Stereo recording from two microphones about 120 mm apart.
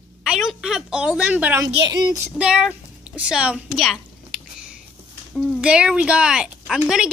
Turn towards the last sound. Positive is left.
turn(degrees=-5)  # may be behind; listen again after turning